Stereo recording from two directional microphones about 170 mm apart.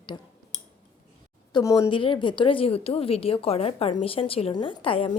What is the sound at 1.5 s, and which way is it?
A woman's voice, 20° left (ahead or behind).